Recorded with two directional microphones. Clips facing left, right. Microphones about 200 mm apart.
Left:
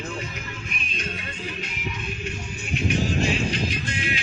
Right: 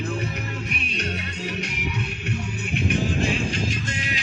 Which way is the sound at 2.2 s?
60° right (ahead or behind).